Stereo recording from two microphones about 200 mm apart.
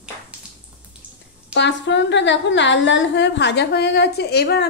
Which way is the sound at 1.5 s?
60° left (ahead or behind).